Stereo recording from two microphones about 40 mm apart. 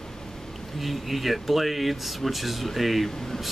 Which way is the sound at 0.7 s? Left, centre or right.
Centre.